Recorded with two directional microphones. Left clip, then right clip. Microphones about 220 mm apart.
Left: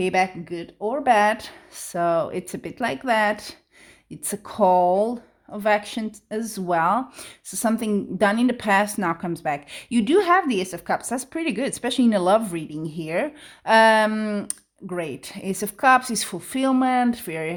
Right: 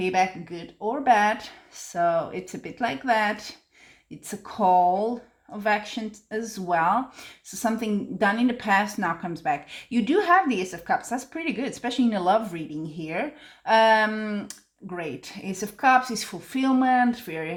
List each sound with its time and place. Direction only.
0.0 s speech: 45° left (ahead or behind)